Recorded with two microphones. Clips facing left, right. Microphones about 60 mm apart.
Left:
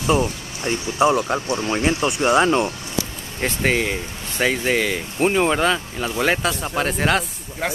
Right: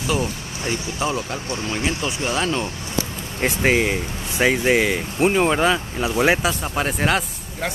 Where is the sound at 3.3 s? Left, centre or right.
Centre.